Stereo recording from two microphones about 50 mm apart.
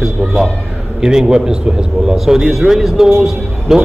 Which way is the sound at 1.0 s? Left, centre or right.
Centre.